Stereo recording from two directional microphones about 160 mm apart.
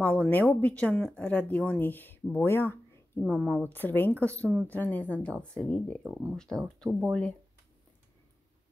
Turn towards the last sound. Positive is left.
turn(degrees=0)  # may be behind; listen again after turning